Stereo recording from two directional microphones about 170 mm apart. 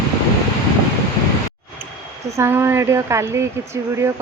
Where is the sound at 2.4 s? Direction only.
15° right (ahead or behind).